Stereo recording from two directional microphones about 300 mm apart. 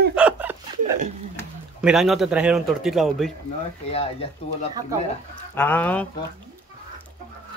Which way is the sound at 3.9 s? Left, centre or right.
Centre.